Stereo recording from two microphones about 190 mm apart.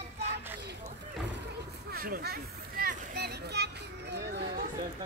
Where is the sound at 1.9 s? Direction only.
50° right (ahead or behind).